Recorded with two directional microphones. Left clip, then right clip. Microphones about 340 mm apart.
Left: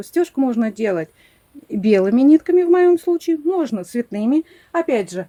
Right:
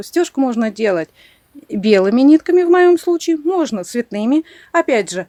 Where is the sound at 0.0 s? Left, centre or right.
Centre.